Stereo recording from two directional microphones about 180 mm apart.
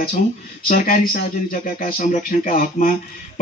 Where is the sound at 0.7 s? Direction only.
50° left (ahead or behind).